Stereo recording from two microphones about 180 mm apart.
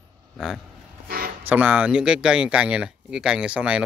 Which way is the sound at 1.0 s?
55° right (ahead or behind).